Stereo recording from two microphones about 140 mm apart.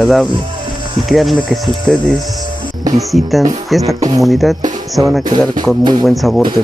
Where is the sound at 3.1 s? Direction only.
Centre (ahead or behind).